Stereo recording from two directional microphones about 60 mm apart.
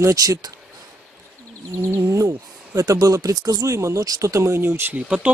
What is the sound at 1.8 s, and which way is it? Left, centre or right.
Speech, right.